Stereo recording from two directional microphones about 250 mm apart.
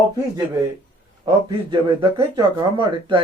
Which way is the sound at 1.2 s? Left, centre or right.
Centre.